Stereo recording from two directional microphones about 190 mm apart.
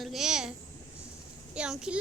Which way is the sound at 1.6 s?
5° right (ahead or behind).